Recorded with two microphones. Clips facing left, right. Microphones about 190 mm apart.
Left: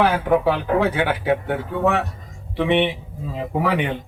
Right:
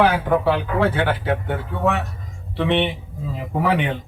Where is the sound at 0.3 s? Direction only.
5° left (ahead or behind).